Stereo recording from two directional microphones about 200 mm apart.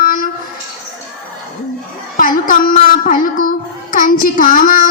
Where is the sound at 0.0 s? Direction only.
45° left (ahead or behind).